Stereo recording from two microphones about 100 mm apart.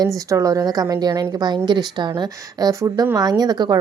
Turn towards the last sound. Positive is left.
turn(degrees=-40)  # may be behind; listen again after turning